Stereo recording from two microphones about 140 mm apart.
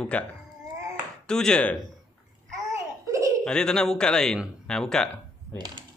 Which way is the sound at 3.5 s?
5° left (ahead or behind).